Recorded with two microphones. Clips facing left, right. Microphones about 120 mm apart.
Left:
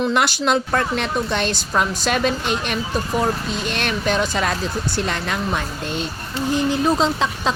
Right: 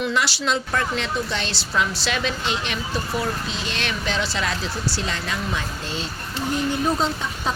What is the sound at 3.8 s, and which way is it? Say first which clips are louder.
Speech: left 5 dB; 50° left (ahead or behind).